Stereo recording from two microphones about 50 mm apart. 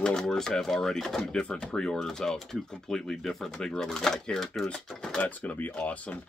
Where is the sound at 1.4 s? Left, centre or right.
Centre.